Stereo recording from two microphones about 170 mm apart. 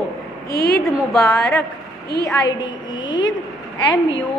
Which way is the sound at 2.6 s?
25° left (ahead or behind).